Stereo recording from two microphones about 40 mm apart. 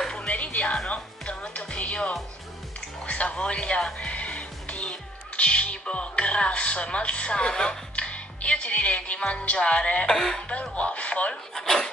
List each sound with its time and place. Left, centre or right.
0.1 s music: left
1.6 s music: left
3.1 s speech: left
4.0 s music: left
7.9 s speech: left
11.5 s speech: centre